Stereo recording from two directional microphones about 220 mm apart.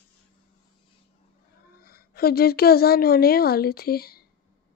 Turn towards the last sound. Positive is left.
turn(degrees=45)  # may be behind; listen again after turning